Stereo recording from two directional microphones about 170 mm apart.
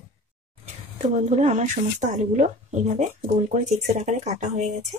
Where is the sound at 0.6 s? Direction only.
45° right (ahead or behind).